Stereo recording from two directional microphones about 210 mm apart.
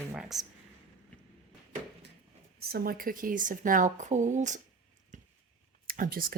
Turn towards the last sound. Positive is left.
turn(degrees=-45)  # may be behind; listen again after turning